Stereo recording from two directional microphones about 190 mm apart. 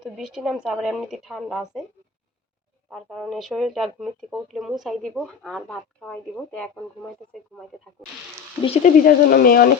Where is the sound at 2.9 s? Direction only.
Centre (ahead or behind).